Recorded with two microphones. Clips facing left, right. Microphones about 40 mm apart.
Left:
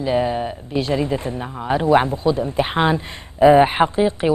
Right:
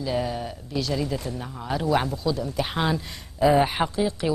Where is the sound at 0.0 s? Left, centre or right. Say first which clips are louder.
Left 7 dB; left.